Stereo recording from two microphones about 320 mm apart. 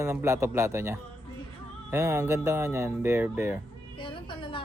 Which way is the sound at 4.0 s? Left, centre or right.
Centre.